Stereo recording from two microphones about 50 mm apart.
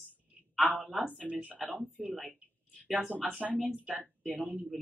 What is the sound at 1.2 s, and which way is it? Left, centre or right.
Speech, right.